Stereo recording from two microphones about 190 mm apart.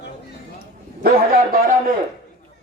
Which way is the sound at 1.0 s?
50° right (ahead or behind).